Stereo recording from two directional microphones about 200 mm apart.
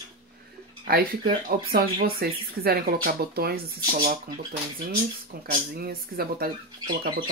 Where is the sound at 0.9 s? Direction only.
50° right (ahead or behind).